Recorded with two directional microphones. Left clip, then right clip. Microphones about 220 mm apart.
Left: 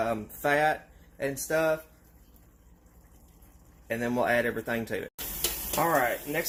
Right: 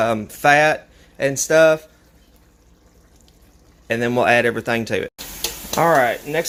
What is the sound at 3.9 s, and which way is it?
Speech, 50° right (ahead or behind).